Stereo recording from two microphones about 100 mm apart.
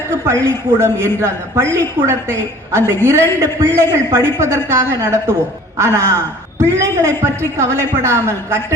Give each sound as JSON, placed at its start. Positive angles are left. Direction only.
{"t": 0.3, "sound": "a man's voice", "side_deg": -25}